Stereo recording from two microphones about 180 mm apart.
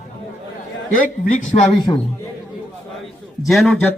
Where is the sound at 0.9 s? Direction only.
45° left (ahead or behind).